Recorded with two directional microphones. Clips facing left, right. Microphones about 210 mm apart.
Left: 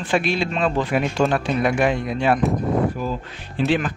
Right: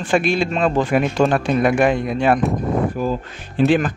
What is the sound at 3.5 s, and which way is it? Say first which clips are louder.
Speech: right 5 dB; 50° right (ahead or behind).